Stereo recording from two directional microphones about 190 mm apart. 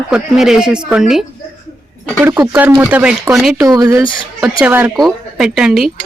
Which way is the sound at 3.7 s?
20° right (ahead or behind).